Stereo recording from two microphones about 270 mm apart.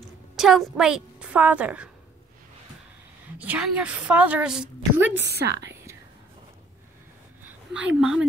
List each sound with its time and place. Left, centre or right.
0.4 s a woman's voice: centre
3.3 s a woman's voice: centre
5.1 s a woman's voice: right
8.0 s a woman's voice: centre